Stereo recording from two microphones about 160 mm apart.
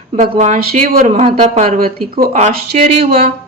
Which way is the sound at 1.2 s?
40° right (ahead or behind).